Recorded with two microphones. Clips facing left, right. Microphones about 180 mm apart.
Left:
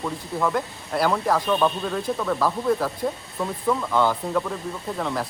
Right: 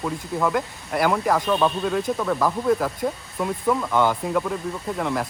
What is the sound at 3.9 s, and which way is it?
Speech, 15° right (ahead or behind).